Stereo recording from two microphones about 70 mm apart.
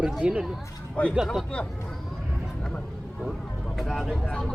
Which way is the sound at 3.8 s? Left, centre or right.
Centre.